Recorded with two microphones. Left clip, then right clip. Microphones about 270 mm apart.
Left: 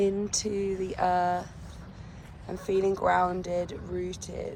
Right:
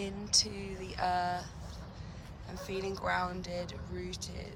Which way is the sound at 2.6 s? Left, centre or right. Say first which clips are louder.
Left 10 dB; centre.